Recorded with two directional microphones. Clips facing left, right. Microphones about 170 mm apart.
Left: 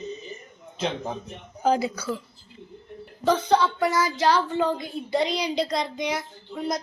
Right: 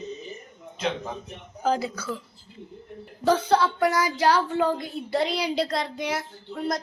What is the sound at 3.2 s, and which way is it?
Speech, 10° right (ahead or behind).